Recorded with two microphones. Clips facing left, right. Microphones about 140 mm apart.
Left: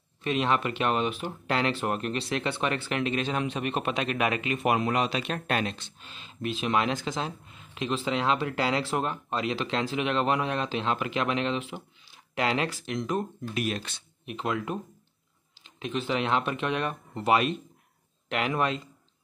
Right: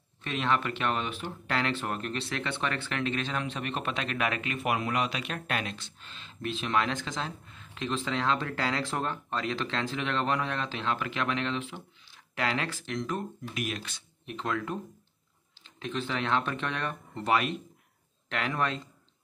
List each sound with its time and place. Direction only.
0.2 s speech: 20° left (ahead or behind)
5.9 s speech: 15° left (ahead or behind)
13.6 s speech: 35° left (ahead or behind)
14.2 s speech: 15° left (ahead or behind)